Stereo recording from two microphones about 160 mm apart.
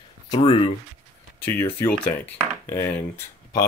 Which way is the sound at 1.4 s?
15° left (ahead or behind).